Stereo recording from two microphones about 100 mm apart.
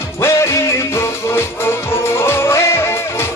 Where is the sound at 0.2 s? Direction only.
30° left (ahead or behind).